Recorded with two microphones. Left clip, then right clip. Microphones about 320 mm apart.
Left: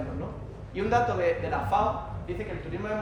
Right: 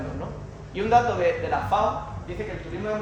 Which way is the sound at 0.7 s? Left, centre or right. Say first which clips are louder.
Right 5 dB; centre.